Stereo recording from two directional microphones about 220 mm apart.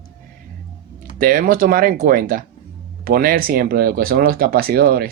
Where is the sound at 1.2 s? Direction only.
40° right (ahead or behind).